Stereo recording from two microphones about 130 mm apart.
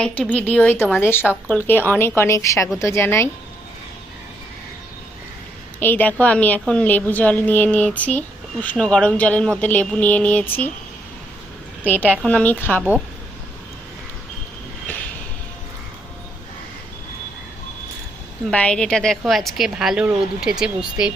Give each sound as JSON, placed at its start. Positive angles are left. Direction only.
{"t": 0.0, "sound": "a woman's voice", "side_deg": 10}
{"t": 5.8, "sound": "a woman's voice", "side_deg": 15}
{"t": 11.9, "sound": "a woman's voice", "side_deg": 15}
{"t": 18.5, "sound": "a woman's voice", "side_deg": 5}